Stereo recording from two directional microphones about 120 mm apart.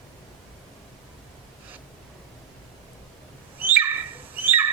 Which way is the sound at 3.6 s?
15° right (ahead or behind).